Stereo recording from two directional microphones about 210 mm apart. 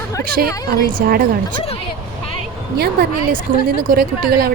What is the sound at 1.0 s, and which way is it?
Speech, 45° right (ahead or behind).